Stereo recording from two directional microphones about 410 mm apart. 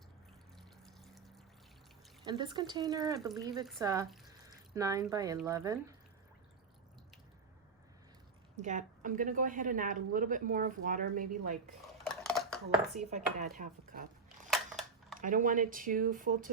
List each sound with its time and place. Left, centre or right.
0.9 s water: centre
2.2 s speech: centre
8.6 s a woman's voice: centre
12.0 s dishes: centre
13.0 s speech: centre
15.2 s a woman's voice: centre